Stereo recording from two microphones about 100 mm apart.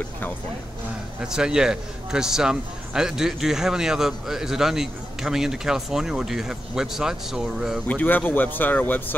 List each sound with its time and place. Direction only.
1.2 s a man's voice: 5° right (ahead or behind)
7.9 s speech: 15° left (ahead or behind)